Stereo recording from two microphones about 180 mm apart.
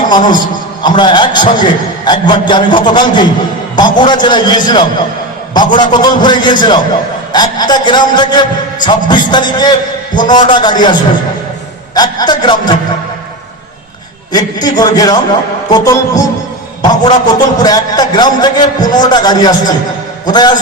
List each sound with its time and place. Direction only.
0.1 s a man's voice: 25° left (ahead or behind)
11.9 s a man's voice: 25° left (ahead or behind)
14.3 s a man's voice: 20° left (ahead or behind)